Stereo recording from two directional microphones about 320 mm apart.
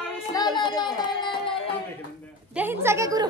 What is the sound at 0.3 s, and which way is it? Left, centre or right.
Music, centre.